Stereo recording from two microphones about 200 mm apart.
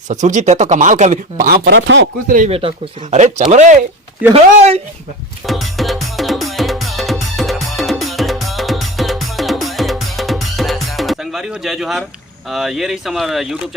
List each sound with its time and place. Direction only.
0.1 s speech: 40° right (ahead or behind)
1.7 s speech: 65° right (ahead or behind)
2.2 s speech: 40° right (ahead or behind)
2.5 s speech: 30° right (ahead or behind)
5.5 s music: centre (ahead or behind)
12.5 s speech: centre (ahead or behind)